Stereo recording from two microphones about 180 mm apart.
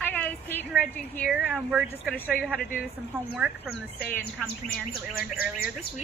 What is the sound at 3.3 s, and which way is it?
Speech, 10° right (ahead or behind).